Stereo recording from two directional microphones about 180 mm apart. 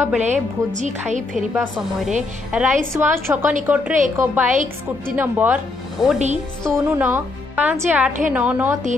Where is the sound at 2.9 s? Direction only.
15° right (ahead or behind).